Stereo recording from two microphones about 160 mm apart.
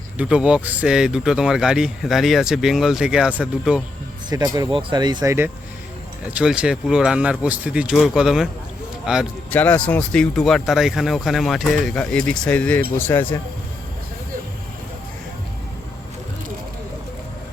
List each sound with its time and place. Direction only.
0.2 s speech: 5° right (ahead or behind)
4.3 s speech: 25° right (ahead or behind)
6.3 s speech: 5° right (ahead or behind)
9.5 s speech: 10° left (ahead or behind)